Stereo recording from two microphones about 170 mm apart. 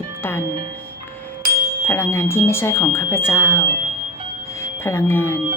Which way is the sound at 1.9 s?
15° left (ahead or behind).